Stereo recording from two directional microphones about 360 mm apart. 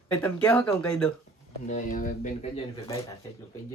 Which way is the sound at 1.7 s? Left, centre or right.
Left.